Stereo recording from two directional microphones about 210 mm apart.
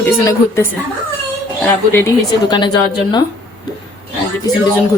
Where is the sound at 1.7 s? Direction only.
10° left (ahead or behind).